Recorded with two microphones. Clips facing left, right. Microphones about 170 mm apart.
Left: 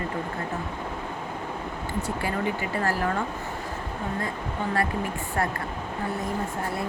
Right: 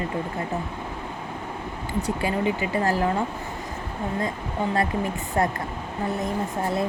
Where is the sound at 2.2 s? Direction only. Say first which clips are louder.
Right 4 dB; 20° right (ahead or behind).